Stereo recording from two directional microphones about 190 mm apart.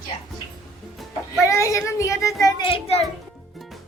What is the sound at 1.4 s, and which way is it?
A child's voice, 15° left (ahead or behind).